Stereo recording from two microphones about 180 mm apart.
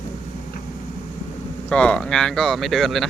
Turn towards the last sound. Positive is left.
turn(degrees=0)  # may be behind; listen again after turning